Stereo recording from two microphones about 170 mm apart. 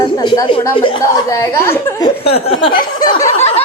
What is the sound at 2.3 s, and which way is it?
Speech, 35° left (ahead or behind).